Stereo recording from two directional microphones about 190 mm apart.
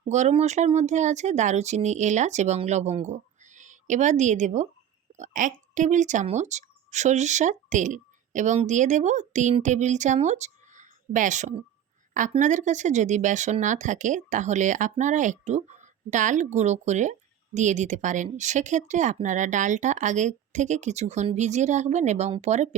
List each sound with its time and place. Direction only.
0.1 s speech: 35° right (ahead or behind)